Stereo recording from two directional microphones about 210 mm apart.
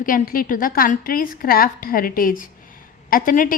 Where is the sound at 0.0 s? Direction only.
40° left (ahead or behind).